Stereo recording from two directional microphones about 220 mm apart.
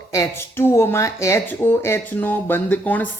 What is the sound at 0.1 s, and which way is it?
Speech, 15° left (ahead or behind).